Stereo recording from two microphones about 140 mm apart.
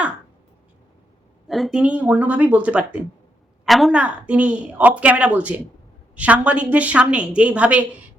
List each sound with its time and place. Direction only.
1.5 s a woman's voice: centre (ahead or behind)